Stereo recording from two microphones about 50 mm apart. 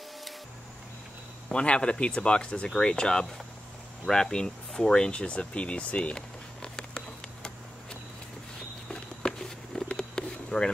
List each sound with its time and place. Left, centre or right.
1.5 s speech: centre
8.8 s patter: centre
9.8 s a sound: centre